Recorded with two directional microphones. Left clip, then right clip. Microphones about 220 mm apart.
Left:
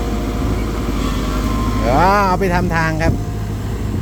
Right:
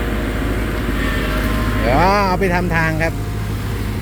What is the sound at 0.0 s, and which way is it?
Vehicle, 40° left (ahead or behind).